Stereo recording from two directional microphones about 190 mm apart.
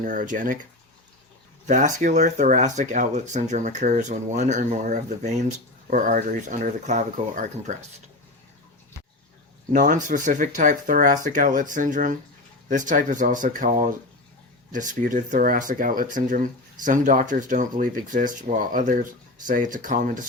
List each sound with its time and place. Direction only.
0.0 s speech: 45° right (ahead or behind)
1.6 s speech: 40° right (ahead or behind)
9.7 s speech: 45° right (ahead or behind)